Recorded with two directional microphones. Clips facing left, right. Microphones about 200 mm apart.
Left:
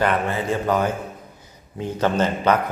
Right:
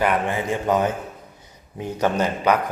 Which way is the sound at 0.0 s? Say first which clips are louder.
Even; 15° right (ahead or behind).